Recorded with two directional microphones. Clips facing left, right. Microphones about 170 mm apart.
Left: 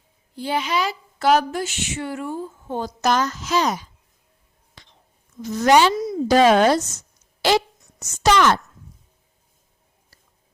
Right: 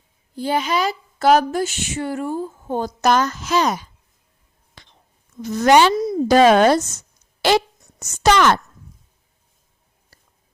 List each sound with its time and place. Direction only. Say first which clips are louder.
0.3 s speech: right 3 dB; 45° right (ahead or behind)
4.8 s whispering: right 1 dB; 55° right (ahead or behind)
5.4 s speech: right 2 dB; 60° right (ahead or behind)
7.4 s a sound: right 2 dB; 55° right (ahead or behind)